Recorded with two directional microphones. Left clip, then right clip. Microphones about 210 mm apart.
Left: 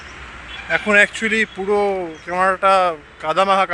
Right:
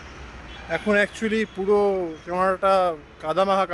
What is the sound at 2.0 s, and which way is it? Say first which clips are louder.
Speech: left 5 dB; 5° left (ahead or behind).